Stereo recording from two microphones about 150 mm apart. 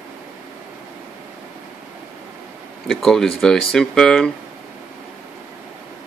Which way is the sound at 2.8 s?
Centre (ahead or behind).